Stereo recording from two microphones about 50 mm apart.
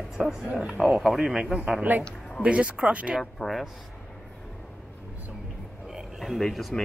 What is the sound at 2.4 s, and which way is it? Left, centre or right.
Speech, right.